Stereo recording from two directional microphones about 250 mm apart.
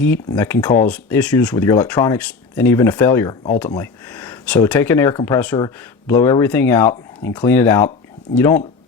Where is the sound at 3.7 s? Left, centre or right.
Centre.